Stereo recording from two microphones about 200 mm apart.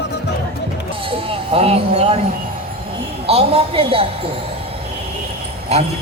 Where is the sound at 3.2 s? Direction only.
30° right (ahead or behind).